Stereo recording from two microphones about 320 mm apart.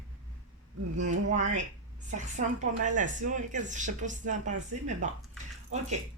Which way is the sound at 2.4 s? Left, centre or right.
Right.